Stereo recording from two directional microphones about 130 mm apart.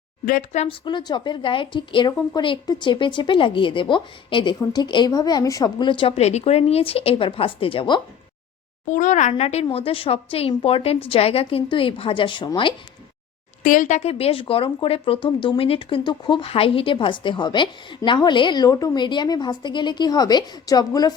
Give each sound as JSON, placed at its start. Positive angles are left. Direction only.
{"t": 0.3, "sound": "speech", "side_deg": 75}
{"t": 0.7, "sound": "speech", "side_deg": 35}
{"t": 8.9, "sound": "speech", "side_deg": 70}
{"t": 13.6, "sound": "speech", "side_deg": 80}